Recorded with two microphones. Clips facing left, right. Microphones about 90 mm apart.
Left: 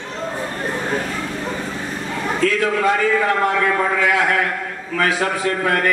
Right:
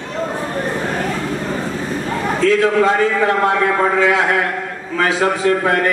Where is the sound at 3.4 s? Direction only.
25° right (ahead or behind).